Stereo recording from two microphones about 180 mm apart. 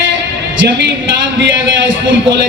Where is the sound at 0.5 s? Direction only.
70° right (ahead or behind).